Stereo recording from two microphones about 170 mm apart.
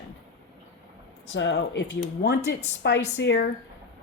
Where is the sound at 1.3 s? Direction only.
90° left.